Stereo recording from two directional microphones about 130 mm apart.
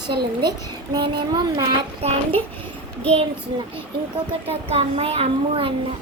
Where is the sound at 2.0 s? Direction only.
50° right (ahead or behind).